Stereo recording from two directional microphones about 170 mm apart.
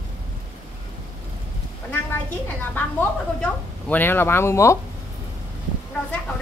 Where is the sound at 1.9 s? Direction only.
10° left (ahead or behind).